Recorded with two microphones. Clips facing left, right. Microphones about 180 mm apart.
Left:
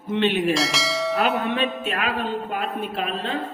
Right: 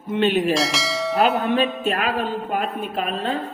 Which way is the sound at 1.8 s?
40° right (ahead or behind).